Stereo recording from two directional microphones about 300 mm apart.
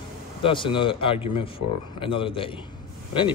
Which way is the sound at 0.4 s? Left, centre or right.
Centre.